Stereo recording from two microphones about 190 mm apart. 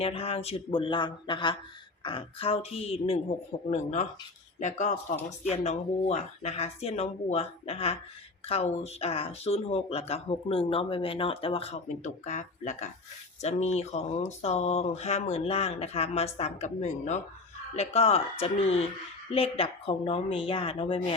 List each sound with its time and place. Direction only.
0.0 s a woman's voice: 30° left (ahead or behind)
4.6 s a woman's voice: 40° left (ahead or behind)